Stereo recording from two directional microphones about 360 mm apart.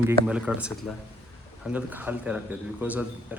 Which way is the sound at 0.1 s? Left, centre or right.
Centre.